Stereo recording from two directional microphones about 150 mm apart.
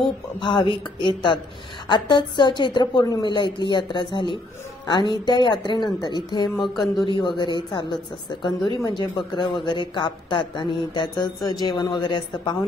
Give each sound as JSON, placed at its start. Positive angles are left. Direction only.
{"t": 0.4, "sound": "a woman's voice", "side_deg": 35}
{"t": 6.6, "sound": "speech", "side_deg": 0}
{"t": 7.1, "sound": "speech", "side_deg": 30}